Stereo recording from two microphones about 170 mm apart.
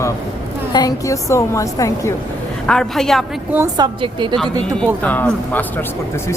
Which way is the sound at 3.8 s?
25° right (ahead or behind).